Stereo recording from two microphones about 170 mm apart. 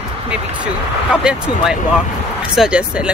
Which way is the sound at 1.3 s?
5° right (ahead or behind).